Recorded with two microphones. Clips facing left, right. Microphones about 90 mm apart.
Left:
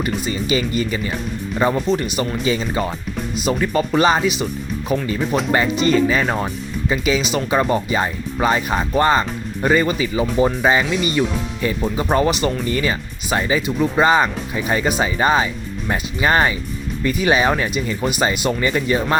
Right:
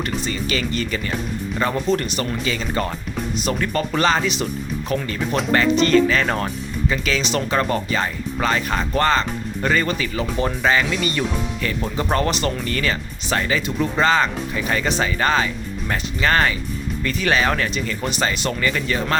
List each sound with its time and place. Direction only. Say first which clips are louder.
0.3 s speech: left 3 dB; 15° left (ahead or behind)
3.3 s speech: left 4 dB; 5° left (ahead or behind); by 19.0 s 20° left (ahead or behind)